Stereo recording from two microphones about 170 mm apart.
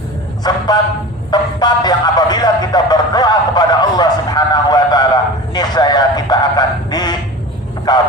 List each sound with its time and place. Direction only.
0.4 s speech: 25° left (ahead or behind)